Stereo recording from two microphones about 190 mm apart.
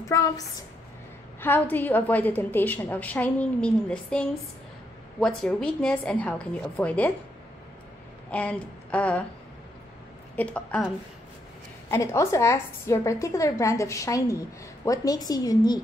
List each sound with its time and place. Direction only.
0.1 s a woman's voice: 15° left (ahead or behind)
1.4 s a woman's voice: 10° left (ahead or behind)
8.3 s speech: 5° left (ahead or behind)
10.3 s a woman's voice: 5° left (ahead or behind)
11.9 s a woman's voice: 15° left (ahead or behind)